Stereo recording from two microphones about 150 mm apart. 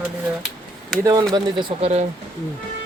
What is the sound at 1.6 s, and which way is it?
Speech, 40° right (ahead or behind).